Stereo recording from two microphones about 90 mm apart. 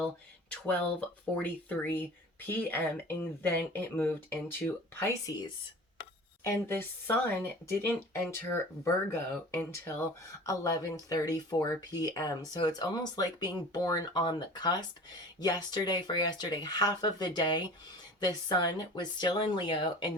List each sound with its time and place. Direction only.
0.5 s speech: 15° left (ahead or behind); by 5.3 s 30° left (ahead or behind)
6.4 s speech: 30° left (ahead or behind); by 20.1 s 60° left (ahead or behind)